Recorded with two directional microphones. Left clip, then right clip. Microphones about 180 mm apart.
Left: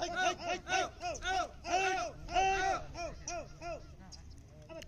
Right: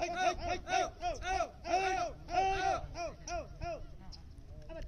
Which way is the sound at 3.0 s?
25° left (ahead or behind).